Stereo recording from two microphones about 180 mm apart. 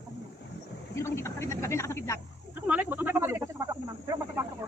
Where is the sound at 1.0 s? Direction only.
15° left (ahead or behind).